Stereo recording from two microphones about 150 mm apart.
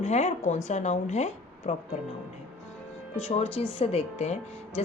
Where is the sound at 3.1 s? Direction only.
45° left (ahead or behind).